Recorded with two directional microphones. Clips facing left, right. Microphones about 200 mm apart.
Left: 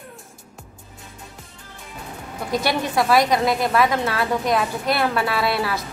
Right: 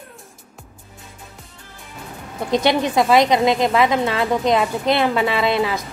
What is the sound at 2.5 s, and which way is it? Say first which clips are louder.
A woman's voice: right 4 dB; 20° right (ahead or behind).